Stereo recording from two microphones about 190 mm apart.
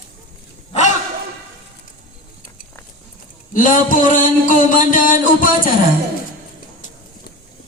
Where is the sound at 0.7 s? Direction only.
40° left (ahead or behind).